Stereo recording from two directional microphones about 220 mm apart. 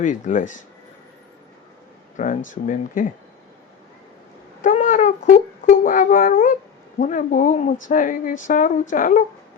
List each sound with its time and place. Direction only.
0.0 s speech: 35° left (ahead or behind)
2.1 s speech: 35° left (ahead or behind)
4.6 s a sound: 35° left (ahead or behind)
7.0 s speech: 35° left (ahead or behind)